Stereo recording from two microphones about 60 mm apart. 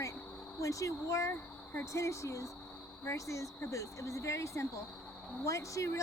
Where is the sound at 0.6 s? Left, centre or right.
Left.